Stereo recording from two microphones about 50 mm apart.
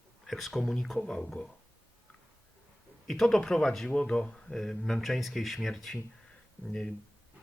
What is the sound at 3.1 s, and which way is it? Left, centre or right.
Speech, centre.